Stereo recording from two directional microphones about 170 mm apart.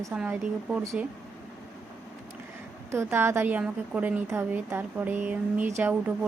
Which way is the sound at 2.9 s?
15° right (ahead or behind).